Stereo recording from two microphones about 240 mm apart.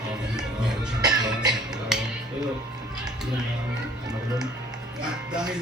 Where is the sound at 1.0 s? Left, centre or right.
Centre.